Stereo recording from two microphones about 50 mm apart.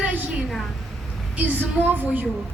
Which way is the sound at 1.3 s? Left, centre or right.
Right.